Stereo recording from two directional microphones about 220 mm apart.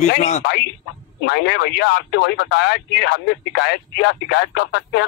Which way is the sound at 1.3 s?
50° left (ahead or behind).